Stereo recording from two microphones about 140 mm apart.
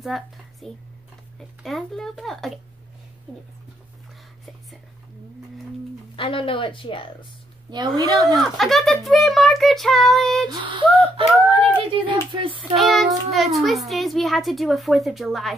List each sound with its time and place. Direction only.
0.0 s a woman's voice: centre (ahead or behind)
6.1 s speech: 40° left (ahead or behind)
7.7 s speech: 30° right (ahead or behind)
8.4 s a child's voice: centre (ahead or behind)
10.5 s speech: 35° right (ahead or behind)
12.7 s a child's voice: centre (ahead or behind)